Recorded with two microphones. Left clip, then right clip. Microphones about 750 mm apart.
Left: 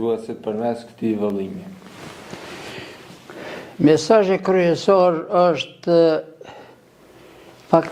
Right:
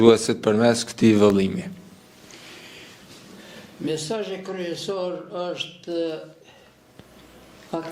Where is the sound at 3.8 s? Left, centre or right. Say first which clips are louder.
Left 13 dB; left.